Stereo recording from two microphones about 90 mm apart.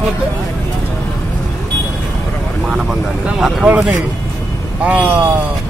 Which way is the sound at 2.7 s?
5° right (ahead or behind).